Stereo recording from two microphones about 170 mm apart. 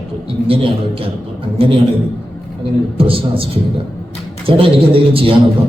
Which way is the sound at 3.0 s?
35° right (ahead or behind).